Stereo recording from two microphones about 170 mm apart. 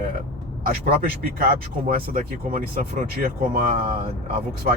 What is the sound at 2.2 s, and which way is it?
Speech, 45° right (ahead or behind).